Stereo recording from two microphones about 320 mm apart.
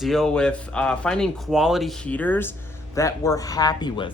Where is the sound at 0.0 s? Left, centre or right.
Centre.